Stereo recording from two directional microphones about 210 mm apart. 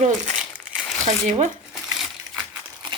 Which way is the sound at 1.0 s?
35° right (ahead or behind).